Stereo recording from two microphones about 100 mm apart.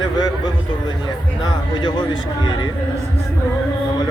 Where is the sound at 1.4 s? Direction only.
45° left (ahead or behind).